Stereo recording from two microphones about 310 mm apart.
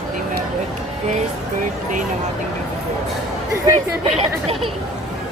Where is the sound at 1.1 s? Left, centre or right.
Right.